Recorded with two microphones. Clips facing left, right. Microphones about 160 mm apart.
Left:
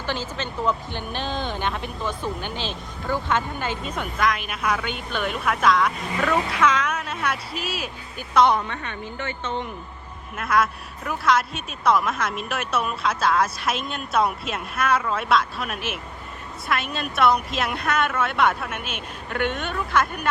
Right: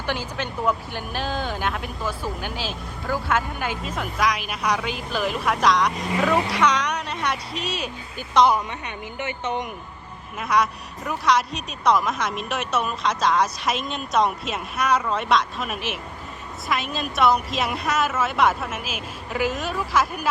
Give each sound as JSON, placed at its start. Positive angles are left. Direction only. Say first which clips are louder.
{"t": 0.0, "sound": "speech", "louder": "right 1 dB", "side_deg": -10}
{"t": 8.5, "sound": "speech", "louder": "even", "side_deg": -15}
{"t": 10.3, "sound": "speech", "louder": "even", "side_deg": 0}